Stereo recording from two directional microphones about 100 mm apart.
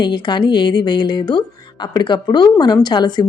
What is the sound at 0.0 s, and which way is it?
Speech, 50° left (ahead or behind).